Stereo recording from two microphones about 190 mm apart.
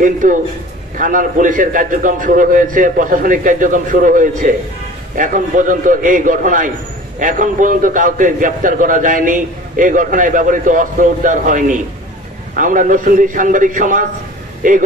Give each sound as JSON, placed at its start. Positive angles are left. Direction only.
{"t": 0.0, "sound": "a man's voice", "side_deg": -45}